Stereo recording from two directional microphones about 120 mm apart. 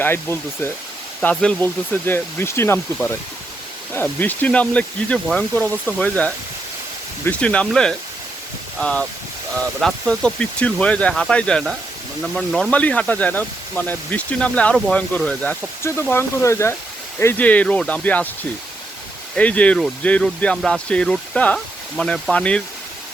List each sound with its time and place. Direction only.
0.0 s speech: 20° left (ahead or behind); by 12.7 s centre (ahead or behind)
12.7 s speech: 10° left (ahead or behind)
15.8 s speech: 20° left (ahead or behind)
19.4 s speech: 10° left (ahead or behind)